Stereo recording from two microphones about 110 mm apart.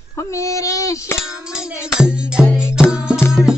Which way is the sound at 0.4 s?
30° left (ahead or behind).